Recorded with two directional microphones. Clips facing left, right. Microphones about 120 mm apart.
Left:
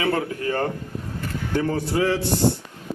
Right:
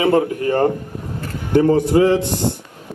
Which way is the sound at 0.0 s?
20° right (ahead or behind).